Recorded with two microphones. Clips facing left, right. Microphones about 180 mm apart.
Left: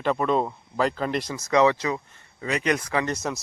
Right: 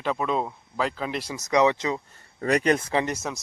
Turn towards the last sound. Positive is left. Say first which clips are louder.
# left 2 dB
turn(degrees=-5)  # may be behind; listen again after turning